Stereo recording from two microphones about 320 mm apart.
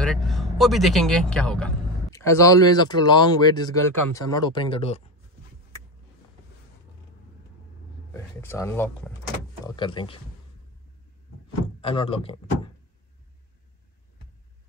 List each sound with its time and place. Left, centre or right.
0.0 s speech: centre
8.1 s speech: centre
11.8 s speech: centre